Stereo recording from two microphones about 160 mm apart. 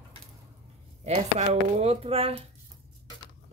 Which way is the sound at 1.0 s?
40° right (ahead or behind).